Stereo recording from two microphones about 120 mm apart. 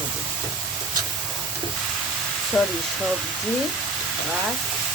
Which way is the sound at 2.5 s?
5° left (ahead or behind).